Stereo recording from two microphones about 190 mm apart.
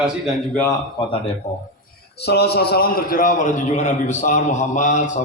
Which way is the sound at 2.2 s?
60° left (ahead or behind).